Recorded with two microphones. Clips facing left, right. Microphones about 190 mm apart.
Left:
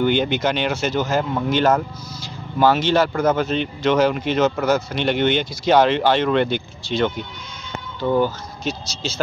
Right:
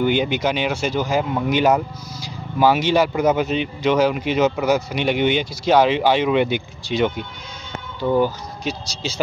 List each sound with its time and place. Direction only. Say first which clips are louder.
0.0 s speech: even; 5° right (ahead or behind)